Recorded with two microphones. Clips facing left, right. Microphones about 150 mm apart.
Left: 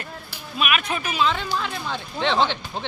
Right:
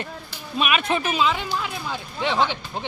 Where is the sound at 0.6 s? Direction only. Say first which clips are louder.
Right 2 dB; 25° right (ahead or behind).